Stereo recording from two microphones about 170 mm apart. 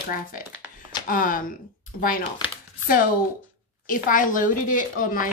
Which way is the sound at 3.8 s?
55° left (ahead or behind).